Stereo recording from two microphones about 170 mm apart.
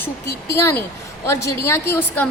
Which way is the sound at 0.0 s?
15° left (ahead or behind).